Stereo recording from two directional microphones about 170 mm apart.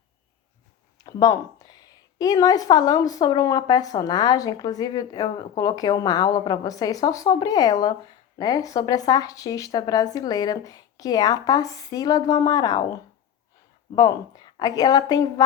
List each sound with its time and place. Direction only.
0.9 s a woman's voice: 25° left (ahead or behind)
13.9 s a woman's voice: 25° left (ahead or behind)